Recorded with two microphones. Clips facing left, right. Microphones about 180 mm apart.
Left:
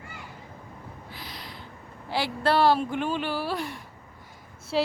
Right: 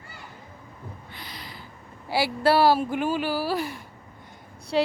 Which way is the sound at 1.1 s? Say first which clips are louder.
Even; centre (ahead or behind).